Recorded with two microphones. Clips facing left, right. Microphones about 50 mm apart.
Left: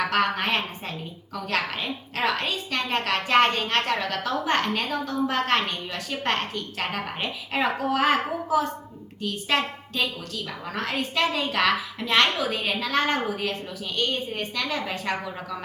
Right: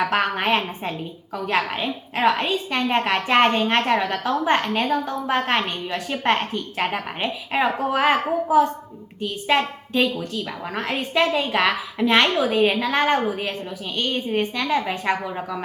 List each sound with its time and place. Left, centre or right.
0.0 s a woman's voice: centre